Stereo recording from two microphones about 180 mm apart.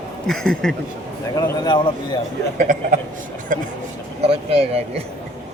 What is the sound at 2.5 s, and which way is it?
A man's voice, 45° right (ahead or behind).